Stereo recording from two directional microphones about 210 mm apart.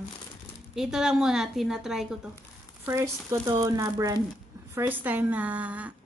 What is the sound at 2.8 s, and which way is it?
A woman's voice, 15° right (ahead or behind).